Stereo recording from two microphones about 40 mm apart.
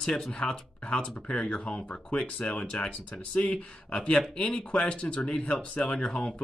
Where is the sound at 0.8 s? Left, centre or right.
Left.